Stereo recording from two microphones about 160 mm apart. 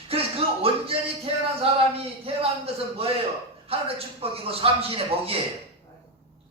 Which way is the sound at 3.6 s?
35° right (ahead or behind).